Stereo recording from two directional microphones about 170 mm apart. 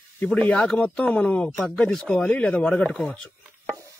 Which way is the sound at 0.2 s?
5° left (ahead or behind).